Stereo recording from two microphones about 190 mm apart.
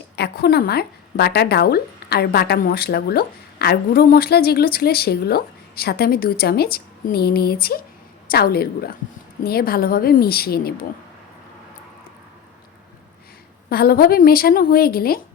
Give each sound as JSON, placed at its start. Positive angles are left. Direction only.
{"t": 0.2, "sound": "a woman's voice", "side_deg": 55}
{"t": 13.7, "sound": "a woman's voice", "side_deg": 55}